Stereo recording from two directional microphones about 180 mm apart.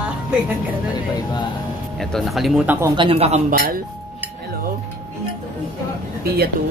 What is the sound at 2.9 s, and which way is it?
Speech, 30° right (ahead or behind).